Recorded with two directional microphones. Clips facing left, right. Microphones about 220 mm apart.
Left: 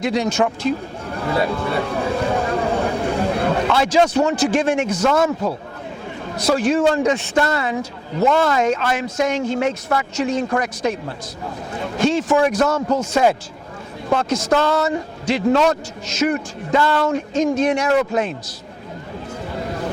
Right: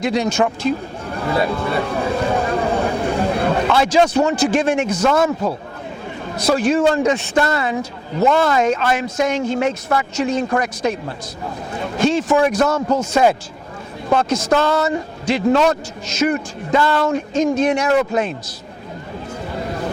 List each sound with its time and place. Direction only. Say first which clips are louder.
0.0 s a man's voice: right 1 dB; 15° right (ahead or behind)
1.0 s a sound: right 1 dB; 25° right (ahead or behind)
4.4 s a man's voice: right 1 dB; 15° right (ahead or behind)
13.0 s a man's voice: right 2 dB; 15° right (ahead or behind)
14.1 s a man's voice: right 1 dB; 25° right (ahead or behind)
19.5 s a sound: right 1 dB; 20° right (ahead or behind)